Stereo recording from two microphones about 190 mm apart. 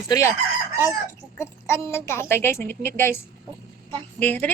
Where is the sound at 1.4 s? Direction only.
15° left (ahead or behind).